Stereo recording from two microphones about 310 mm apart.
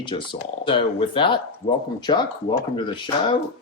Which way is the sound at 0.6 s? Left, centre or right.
Centre.